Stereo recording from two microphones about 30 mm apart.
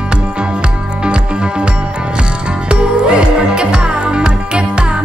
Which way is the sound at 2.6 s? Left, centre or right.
Right.